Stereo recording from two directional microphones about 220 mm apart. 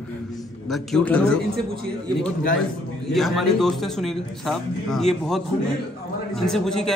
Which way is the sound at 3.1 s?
Centre (ahead or behind).